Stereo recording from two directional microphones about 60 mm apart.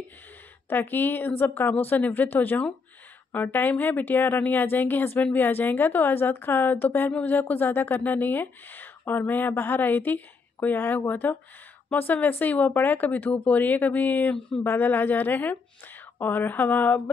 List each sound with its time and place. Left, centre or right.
0.7 s a woman's voice: left